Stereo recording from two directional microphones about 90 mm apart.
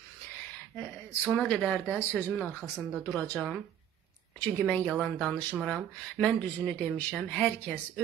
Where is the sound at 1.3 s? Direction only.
10° left (ahead or behind).